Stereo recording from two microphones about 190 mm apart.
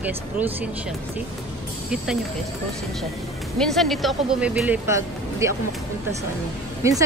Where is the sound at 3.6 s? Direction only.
Centre (ahead or behind); by 5.5 s 15° right (ahead or behind).